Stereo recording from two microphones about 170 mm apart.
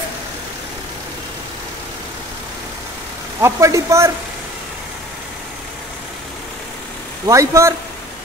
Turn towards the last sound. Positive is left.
turn(degrees=-20)  # may be behind; listen again after turning